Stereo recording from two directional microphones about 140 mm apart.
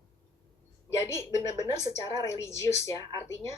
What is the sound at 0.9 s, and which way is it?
A woman's voice, 20° left (ahead or behind).